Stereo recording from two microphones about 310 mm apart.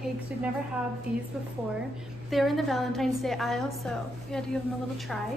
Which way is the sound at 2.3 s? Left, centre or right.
Centre.